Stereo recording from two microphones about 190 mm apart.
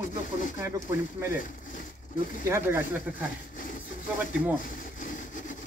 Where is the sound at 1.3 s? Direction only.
45° left (ahead or behind).